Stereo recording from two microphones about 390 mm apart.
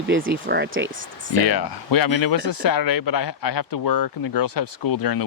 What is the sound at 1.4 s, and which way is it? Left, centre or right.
Speech, left.